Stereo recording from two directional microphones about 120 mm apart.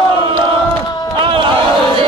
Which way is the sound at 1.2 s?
45° right (ahead or behind).